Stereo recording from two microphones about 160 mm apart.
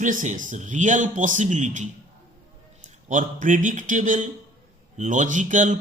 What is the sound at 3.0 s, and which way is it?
Speech, 50° right (ahead or behind).